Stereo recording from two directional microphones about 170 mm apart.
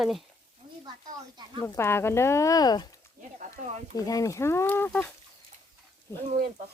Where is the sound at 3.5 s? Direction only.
40° right (ahead or behind).